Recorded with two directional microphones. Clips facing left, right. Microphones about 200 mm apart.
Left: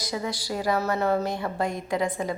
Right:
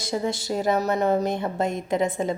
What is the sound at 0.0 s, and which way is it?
A woman's voice, 25° right (ahead or behind).